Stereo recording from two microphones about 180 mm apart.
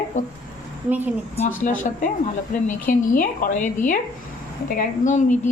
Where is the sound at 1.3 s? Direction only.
35° left (ahead or behind).